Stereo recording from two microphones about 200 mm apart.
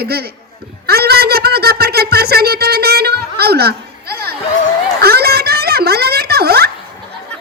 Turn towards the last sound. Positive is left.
turn(degrees=-55)  # may be behind; listen again after turning